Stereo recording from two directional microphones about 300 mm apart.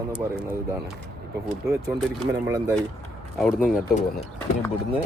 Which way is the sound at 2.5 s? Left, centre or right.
Centre.